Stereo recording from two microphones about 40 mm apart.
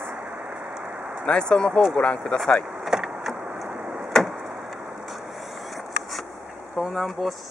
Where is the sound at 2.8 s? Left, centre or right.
Centre.